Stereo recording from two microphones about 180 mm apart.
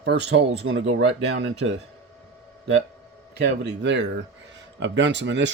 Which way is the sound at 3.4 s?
75° right (ahead or behind).